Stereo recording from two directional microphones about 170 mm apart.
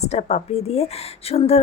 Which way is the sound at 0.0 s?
40° left (ahead or behind).